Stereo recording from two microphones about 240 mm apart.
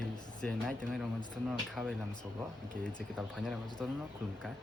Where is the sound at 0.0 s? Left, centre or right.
Centre.